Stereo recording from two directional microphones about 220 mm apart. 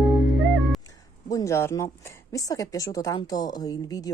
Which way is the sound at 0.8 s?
15° left (ahead or behind).